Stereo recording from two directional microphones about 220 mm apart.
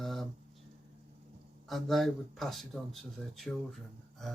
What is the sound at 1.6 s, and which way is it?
Speech, centre (ahead or behind).